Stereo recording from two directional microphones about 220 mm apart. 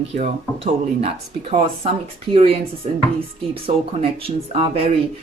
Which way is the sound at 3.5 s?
25° right (ahead or behind).